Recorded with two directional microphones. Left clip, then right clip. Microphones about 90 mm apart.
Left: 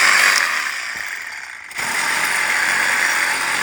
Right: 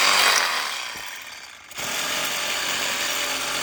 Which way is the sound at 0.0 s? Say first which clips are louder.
Left 5 dB; 55° right (ahead or behind).